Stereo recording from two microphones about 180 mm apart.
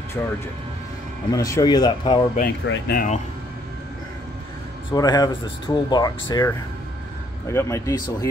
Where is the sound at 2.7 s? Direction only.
90° left.